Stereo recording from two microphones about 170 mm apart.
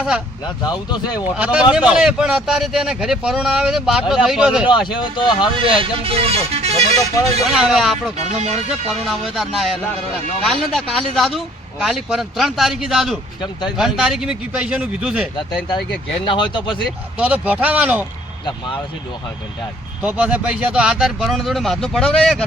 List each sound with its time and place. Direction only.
0.4 s speech: 25° left (ahead or behind)
1.1 s a man's voice: 5° right (ahead or behind)
4.6 s speech: 30° left (ahead or behind)
5.7 s speech: 35° right (ahead or behind)
7.5 s a man's voice: 5° right (ahead or behind)
8.3 s speech: 40° right (ahead or behind)
8.5 s a man's voice: centre (ahead or behind)
16.2 s speech: 25° left (ahead or behind)
17.2 s speech: 10° right (ahead or behind)
20.0 s a man's voice: 5° right (ahead or behind)